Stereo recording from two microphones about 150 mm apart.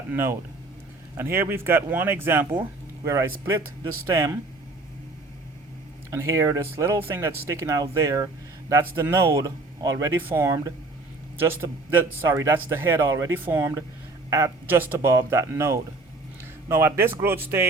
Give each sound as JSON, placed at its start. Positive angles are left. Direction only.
{"t": 0.1, "sound": "a man's voice", "side_deg": -15}
{"t": 6.1, "sound": "a man's voice", "side_deg": -20}